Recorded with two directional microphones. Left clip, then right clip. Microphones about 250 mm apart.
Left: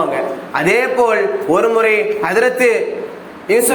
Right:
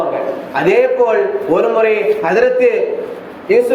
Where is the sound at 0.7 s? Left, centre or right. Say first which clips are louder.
Right 2 dB; left.